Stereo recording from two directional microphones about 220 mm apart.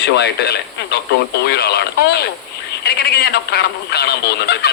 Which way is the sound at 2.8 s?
45° left (ahead or behind).